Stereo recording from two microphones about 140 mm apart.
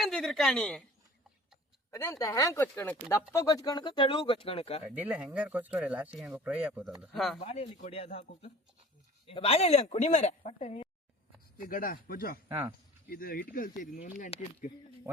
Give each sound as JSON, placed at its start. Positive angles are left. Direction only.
{"t": 0.0, "sound": "speech", "side_deg": 0}
{"t": 1.9, "sound": "speech", "side_deg": 25}
{"t": 3.3, "sound": "speech", "side_deg": 25}
{"t": 4.9, "sound": "speech", "side_deg": -10}
{"t": 7.4, "sound": "speech", "side_deg": 55}
{"t": 11.5, "sound": "speech", "side_deg": 90}
{"t": 12.5, "sound": "speech", "side_deg": -20}
{"t": 13.1, "sound": "speech", "side_deg": 90}